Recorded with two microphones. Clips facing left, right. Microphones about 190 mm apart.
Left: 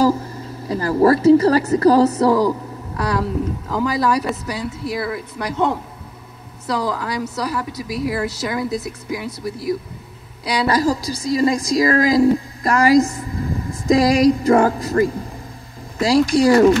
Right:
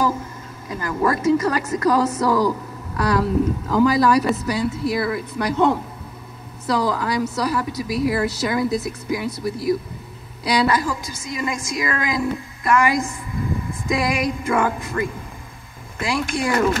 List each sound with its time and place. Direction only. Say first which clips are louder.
0.0 s a woman's voice: left 5 dB; 35° left (ahead or behind)
10.4 s a woman's voice: left 2 dB; 35° left (ahead or behind)